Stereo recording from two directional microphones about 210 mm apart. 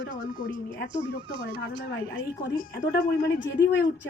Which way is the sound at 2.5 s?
45° left (ahead or behind).